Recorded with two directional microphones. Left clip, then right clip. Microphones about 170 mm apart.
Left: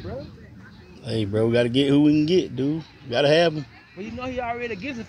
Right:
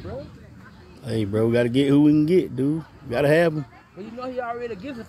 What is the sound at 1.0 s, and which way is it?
Speech, 30° right (ahead or behind).